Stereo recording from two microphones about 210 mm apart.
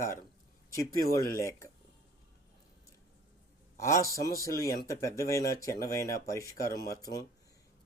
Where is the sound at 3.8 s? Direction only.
15° left (ahead or behind).